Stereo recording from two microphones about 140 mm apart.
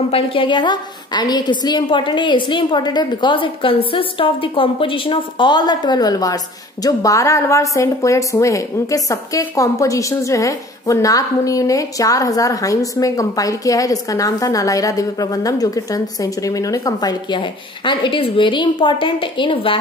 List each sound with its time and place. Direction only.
0.1 s a woman's voice: 40° left (ahead or behind)